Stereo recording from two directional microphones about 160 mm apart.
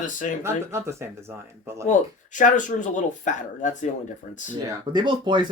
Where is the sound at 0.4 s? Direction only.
15° right (ahead or behind).